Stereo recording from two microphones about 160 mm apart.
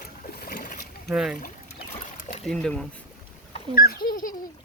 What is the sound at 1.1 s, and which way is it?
Speech, 5° right (ahead or behind).